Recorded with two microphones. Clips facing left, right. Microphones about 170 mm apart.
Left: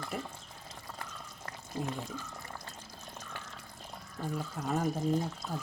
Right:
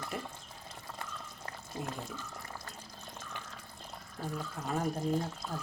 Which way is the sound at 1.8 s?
Centre (ahead or behind).